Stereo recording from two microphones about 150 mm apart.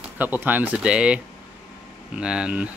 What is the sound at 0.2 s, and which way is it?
Speech, 10° right (ahead or behind).